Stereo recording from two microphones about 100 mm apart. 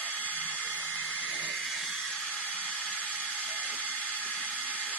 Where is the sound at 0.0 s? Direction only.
15° left (ahead or behind).